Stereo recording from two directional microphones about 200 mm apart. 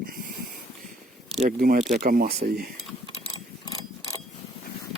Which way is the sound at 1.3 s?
45° right (ahead or behind).